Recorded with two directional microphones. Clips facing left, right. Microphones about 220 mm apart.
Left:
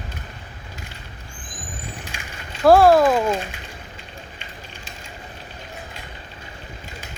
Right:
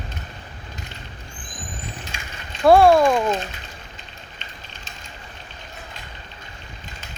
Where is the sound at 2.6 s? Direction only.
Centre (ahead or behind).